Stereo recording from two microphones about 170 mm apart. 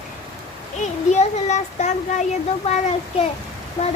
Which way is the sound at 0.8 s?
40° left (ahead or behind).